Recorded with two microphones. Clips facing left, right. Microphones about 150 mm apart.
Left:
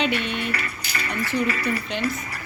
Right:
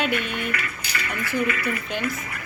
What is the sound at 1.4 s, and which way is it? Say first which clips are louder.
Speech: left 1 dB; 30° left (ahead or behind).